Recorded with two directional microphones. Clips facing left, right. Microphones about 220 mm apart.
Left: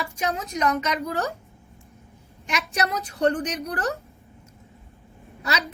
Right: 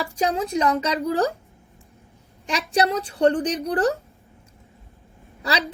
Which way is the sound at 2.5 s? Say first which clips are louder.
Right 5 dB; 30° right (ahead or behind).